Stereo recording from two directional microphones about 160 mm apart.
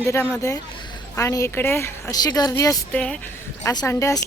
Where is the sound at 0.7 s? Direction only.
30° left (ahead or behind).